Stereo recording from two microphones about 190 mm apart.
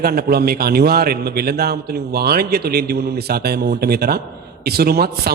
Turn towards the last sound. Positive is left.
turn(degrees=-55)  # may be behind; listen again after turning